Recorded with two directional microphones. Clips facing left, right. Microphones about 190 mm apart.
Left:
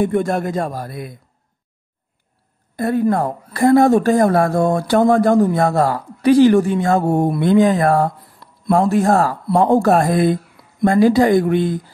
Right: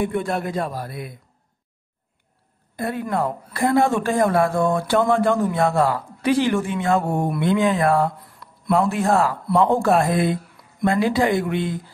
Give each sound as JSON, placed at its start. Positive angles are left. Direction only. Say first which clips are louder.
{"t": 0.0, "sound": "a man's voice", "louder": "left 5 dB", "side_deg": 45}
{"t": 2.8, "sound": "a woman's voice", "louder": "left 7 dB", "side_deg": 40}